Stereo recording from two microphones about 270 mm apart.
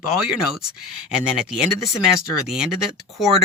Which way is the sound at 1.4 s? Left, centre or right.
Centre.